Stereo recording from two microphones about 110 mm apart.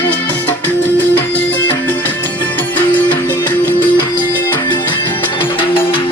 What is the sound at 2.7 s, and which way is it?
Music, 15° left (ahead or behind).